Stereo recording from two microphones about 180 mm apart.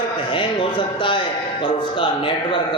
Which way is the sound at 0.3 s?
30° left (ahead or behind).